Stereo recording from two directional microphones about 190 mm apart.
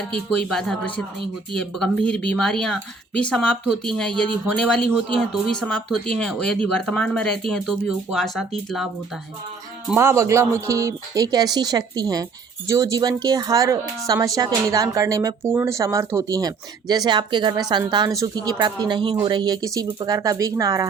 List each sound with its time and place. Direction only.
0.1 s speech: 5° left (ahead or behind); by 20.8 s 15° right (ahead or behind)